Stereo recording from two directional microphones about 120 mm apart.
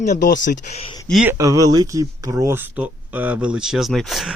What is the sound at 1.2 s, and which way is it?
Speech, 25° right (ahead or behind).